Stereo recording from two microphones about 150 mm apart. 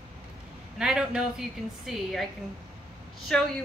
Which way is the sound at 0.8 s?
5° right (ahead or behind).